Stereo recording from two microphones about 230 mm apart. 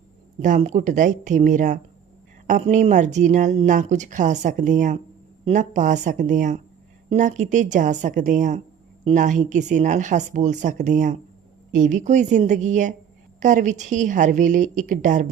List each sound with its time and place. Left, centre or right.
0.3 s speech: right